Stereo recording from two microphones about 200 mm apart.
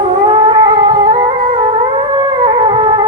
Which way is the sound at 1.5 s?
25° right (ahead or behind).